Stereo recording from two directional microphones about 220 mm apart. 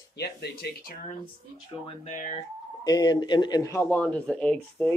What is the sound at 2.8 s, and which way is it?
Speech, 20° left (ahead or behind).